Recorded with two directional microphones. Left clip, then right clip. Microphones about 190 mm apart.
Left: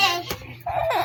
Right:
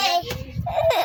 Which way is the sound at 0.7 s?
30° right (ahead or behind).